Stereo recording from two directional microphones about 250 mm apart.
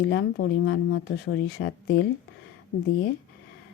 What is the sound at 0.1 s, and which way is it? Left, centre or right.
Speech, left.